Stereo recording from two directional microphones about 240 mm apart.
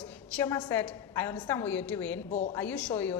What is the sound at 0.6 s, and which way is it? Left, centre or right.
A woman's voice, centre.